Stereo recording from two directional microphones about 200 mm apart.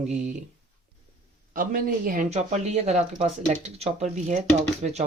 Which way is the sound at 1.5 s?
45° right (ahead or behind).